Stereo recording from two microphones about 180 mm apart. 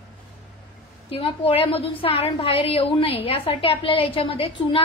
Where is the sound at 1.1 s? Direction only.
30° left (ahead or behind).